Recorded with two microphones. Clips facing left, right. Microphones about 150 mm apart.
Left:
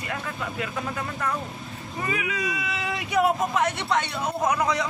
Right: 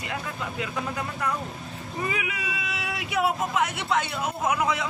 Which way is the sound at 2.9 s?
5° right (ahead or behind).